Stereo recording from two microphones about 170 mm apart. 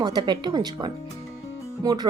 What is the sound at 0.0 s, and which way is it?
A woman's voice, 25° right (ahead or behind).